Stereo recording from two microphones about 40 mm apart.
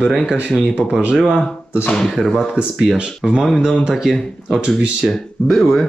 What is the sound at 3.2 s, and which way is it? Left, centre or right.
Speech, centre.